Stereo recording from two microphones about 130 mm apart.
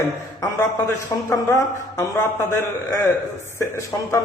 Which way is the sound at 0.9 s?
20° left (ahead or behind).